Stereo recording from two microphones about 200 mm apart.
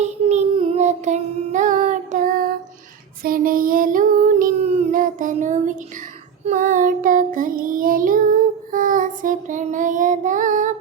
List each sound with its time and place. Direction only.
0.0 s child singing: 35° right (ahead or behind)